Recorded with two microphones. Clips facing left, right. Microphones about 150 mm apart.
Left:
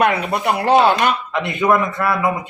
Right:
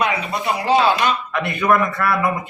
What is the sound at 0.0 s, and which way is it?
Speech, 60° left (ahead or behind).